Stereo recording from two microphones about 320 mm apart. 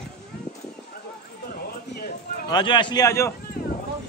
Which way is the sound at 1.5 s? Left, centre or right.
Left.